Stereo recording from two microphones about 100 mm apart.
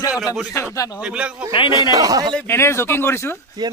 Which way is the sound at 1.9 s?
35° right (ahead or behind).